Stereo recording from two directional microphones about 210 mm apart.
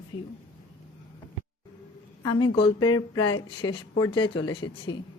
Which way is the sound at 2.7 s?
90° left.